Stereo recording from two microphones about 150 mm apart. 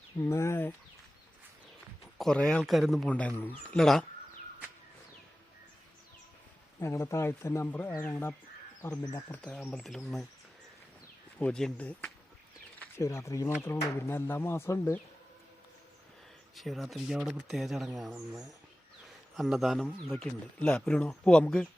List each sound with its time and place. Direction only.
0.2 s speech: 20° left (ahead or behind)
2.1 s speech: 5° left (ahead or behind)
6.7 s speech: 20° left (ahead or behind); by 10.2 s centre (ahead or behind)
11.3 s speech: 5° left (ahead or behind)
13.0 s speech: 20° left (ahead or behind)
16.6 s speech: centre (ahead or behind)
19.4 s speech: centre (ahead or behind)